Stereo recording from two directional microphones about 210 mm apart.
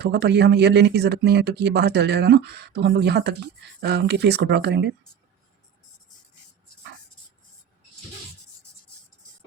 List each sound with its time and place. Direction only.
0.0 s speech: 50° right (ahead or behind)